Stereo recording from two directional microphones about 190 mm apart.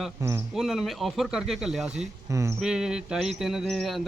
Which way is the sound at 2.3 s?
15° right (ahead or behind).